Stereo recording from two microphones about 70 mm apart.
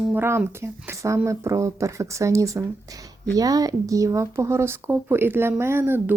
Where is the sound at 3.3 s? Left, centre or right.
Right.